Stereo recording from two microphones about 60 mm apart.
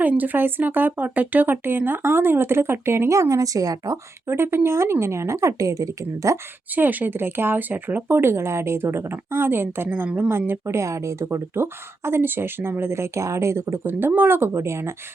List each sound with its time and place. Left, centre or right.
0.0 s speech: right
4.3 s speech: right
6.7 s speech: right
10.8 s speech: right
11.5 s speech: right